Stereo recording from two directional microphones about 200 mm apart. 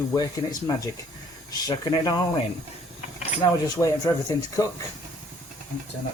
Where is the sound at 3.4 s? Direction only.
20° left (ahead or behind).